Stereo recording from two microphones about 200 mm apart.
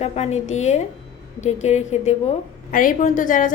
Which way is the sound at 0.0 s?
35° left (ahead or behind).